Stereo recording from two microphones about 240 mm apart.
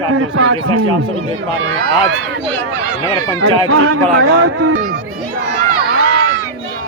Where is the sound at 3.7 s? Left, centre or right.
Right.